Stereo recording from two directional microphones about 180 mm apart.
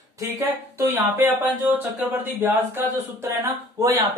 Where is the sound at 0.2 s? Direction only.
15° right (ahead or behind).